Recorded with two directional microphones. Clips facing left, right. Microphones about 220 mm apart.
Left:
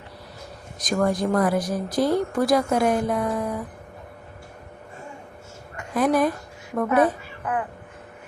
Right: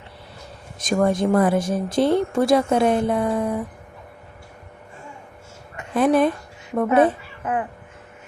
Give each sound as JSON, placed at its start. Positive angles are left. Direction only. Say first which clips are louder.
{"t": 0.9, "sound": "speech", "louder": "right 3 dB", "side_deg": -25}
{"t": 5.7, "sound": "a woman's voice", "louder": "right 3 dB", "side_deg": -25}